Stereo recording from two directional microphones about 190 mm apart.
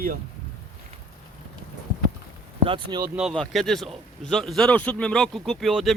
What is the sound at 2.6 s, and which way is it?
Speech, 25° right (ahead or behind).